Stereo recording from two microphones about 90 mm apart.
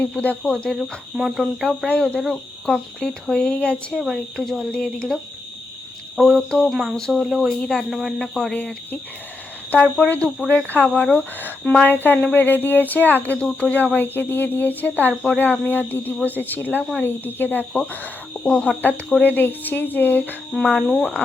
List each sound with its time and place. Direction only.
0.4 s speech: 5° left (ahead or behind)
1.9 s speech: 10° left (ahead or behind)
4.0 s speech: centre (ahead or behind)
9.7 s speech: 20° left (ahead or behind)
17.7 s speech: 10° left (ahead or behind)
20.7 s speech: 5° left (ahead or behind)
21.0 s speech: 15° left (ahead or behind)